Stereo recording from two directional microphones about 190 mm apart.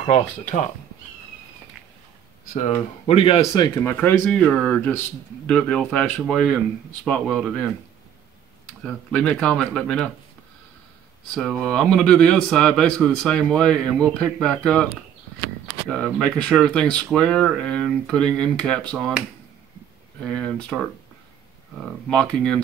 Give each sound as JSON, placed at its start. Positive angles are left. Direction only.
{"t": 3.1, "sound": "speech", "side_deg": 30}
{"t": 3.5, "sound": "speech", "side_deg": 20}
{"t": 3.9, "sound": "speech", "side_deg": 5}
{"t": 8.8, "sound": "speech", "side_deg": 5}
{"t": 11.3, "sound": "speech", "side_deg": 5}
{"t": 15.9, "sound": "speech", "side_deg": 5}
{"t": 20.2, "sound": "speech", "side_deg": 5}